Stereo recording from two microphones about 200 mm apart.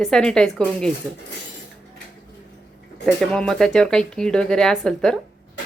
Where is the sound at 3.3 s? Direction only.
5° left (ahead or behind).